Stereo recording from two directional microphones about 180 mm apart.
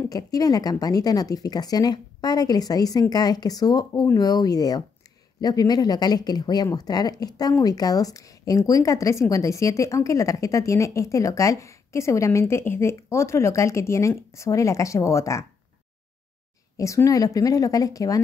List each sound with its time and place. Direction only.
0.1 s speech: 20° left (ahead or behind)
16.7 s speech: 15° left (ahead or behind)